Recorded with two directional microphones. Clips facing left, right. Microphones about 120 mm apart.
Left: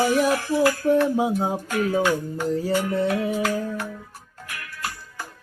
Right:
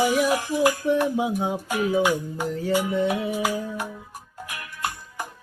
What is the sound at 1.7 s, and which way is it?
Music, 15° right (ahead or behind).